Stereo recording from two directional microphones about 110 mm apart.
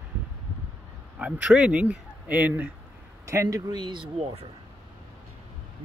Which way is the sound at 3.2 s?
30° right (ahead or behind).